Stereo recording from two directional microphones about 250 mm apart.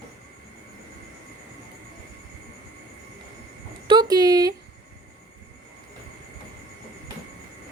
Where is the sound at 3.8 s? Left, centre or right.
Centre.